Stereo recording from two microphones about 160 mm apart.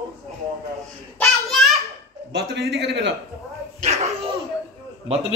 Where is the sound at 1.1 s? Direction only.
Centre (ahead or behind).